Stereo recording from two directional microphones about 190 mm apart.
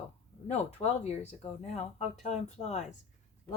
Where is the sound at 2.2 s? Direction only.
35° left (ahead or behind).